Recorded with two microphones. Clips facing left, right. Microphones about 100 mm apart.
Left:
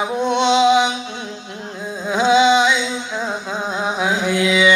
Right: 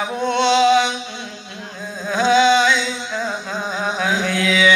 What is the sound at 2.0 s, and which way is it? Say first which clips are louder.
Humming: left 1 dB; 15° left (ahead or behind).